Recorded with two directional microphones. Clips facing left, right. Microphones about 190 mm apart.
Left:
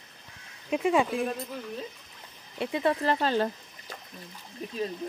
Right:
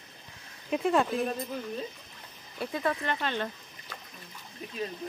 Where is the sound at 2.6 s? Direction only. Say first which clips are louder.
Left 4 dB; 25° left (ahead or behind).